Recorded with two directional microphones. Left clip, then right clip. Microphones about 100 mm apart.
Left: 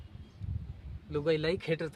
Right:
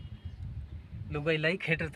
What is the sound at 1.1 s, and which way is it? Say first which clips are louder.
Speech: even; 20° left (ahead or behind).